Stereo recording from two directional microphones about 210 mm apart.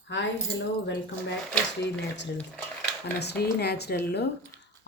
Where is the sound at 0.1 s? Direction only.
60° left (ahead or behind).